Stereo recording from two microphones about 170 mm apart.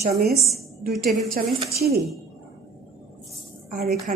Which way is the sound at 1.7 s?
65° right (ahead or behind).